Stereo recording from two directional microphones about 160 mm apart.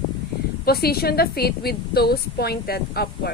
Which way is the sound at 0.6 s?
75° left (ahead or behind).